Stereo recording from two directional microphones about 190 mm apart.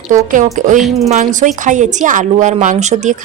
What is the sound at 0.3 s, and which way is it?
A woman's voice, 40° right (ahead or behind).